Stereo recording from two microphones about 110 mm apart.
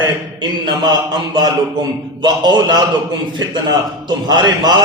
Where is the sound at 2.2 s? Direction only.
40° right (ahead or behind).